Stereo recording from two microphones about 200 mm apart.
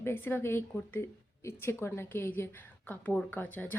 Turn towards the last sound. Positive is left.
turn(degrees=10)  # may be behind; listen again after turning